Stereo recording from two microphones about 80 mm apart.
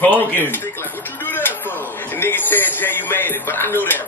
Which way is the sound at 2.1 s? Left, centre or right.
Left.